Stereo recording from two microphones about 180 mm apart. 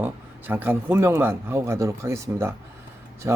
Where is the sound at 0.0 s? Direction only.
10° right (ahead or behind).